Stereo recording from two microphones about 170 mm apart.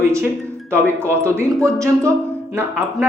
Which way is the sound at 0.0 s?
15° right (ahead or behind).